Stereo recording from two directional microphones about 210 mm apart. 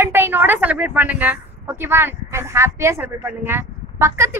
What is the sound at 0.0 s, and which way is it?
A woman's voice, 10° right (ahead or behind).